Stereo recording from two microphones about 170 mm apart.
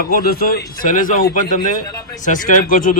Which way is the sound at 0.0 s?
60° left (ahead or behind).